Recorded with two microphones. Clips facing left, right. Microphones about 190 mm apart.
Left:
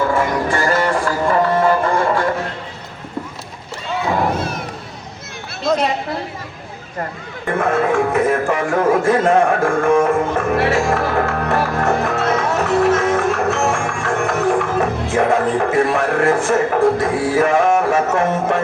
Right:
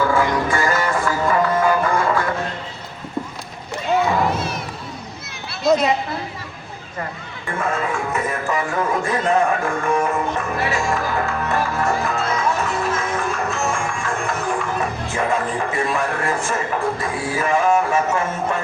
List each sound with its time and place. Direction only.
0.5 s music: 35° left (ahead or behind)
5.6 s a sound: 10° right (ahead or behind)
7.4 s music: 65° left (ahead or behind)
8.9 s a man's voice: 70° left (ahead or behind)
9.6 s music: 50° left (ahead or behind)
11.0 s music: 65° left (ahead or behind)